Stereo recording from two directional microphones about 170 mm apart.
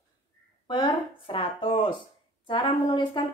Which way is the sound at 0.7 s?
30° left (ahead or behind).